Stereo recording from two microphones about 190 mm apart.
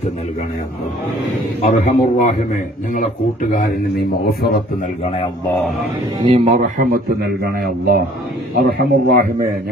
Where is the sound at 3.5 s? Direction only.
55° left (ahead or behind).